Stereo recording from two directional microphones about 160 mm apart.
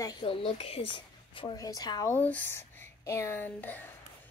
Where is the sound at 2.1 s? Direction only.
10° left (ahead or behind).